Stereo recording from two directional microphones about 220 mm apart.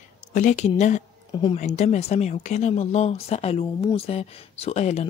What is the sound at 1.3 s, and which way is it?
Speech, 20° left (ahead or behind).